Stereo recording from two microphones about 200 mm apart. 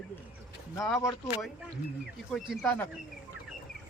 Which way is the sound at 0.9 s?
15° left (ahead or behind).